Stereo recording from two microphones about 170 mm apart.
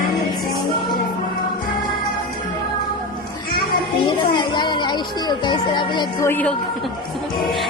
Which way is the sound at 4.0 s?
25° left (ahead or behind).